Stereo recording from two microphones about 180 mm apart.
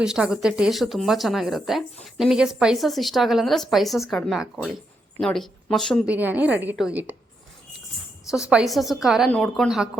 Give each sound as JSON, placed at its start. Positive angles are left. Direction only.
{"t": 0.0, "sound": "speech", "side_deg": -5}
{"t": 6.1, "sound": "a woman's voice", "side_deg": -10}
{"t": 8.3, "sound": "speech", "side_deg": -5}